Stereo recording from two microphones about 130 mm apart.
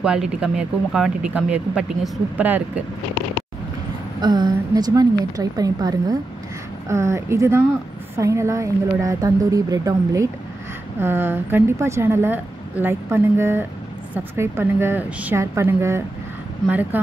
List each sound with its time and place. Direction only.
0.0 s a woman's voice: 5° right (ahead or behind)
4.2 s a woman's voice: 35° right (ahead or behind); by 17.0 s 15° right (ahead or behind)